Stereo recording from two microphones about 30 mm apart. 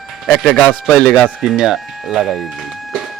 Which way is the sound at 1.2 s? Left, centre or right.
Right.